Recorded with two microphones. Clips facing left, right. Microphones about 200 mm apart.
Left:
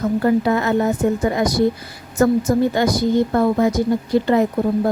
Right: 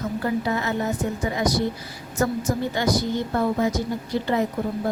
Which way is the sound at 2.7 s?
50° left (ahead or behind).